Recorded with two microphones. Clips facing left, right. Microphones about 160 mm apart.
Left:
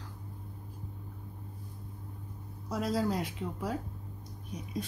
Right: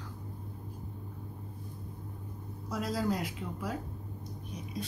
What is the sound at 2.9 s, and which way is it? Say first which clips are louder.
Speech: even; 30° left (ahead or behind).